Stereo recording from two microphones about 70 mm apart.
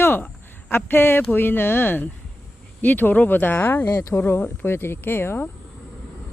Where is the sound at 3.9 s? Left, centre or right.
Left.